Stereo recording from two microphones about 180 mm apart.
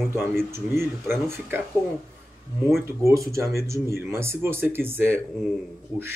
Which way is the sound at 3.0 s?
15° right (ahead or behind).